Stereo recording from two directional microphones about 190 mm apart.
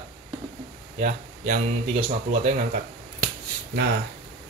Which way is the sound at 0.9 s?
45° right (ahead or behind).